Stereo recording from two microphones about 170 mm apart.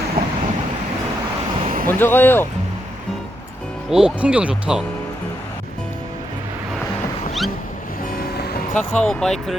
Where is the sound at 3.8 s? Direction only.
5° right (ahead or behind).